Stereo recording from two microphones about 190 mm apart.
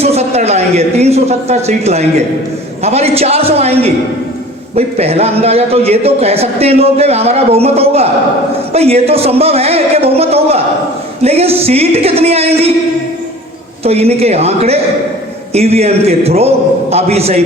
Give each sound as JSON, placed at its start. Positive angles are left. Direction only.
{"t": 0.0, "sound": "a sound", "side_deg": -35}
{"t": 2.8, "sound": "a man's voice", "side_deg": -35}
{"t": 13.8, "sound": "a man's voice", "side_deg": -35}